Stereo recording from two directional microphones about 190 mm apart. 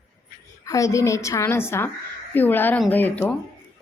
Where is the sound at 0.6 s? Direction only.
15° left (ahead or behind).